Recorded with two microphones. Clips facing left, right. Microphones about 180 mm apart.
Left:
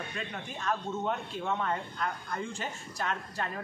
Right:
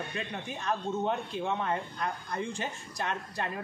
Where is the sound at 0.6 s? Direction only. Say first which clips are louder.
Right 1 dB; 15° right (ahead or behind).